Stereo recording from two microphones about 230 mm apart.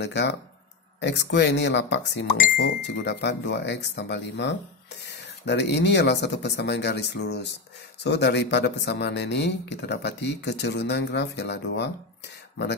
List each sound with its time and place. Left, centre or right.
0.0 s speech: left